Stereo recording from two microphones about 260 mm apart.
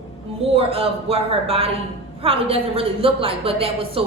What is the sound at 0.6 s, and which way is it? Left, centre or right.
A woman's voice, right.